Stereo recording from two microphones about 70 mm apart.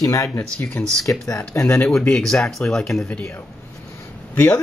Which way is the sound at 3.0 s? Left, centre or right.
Centre.